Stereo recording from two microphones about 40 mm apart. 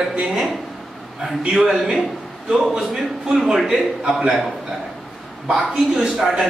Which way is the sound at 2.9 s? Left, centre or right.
Centre.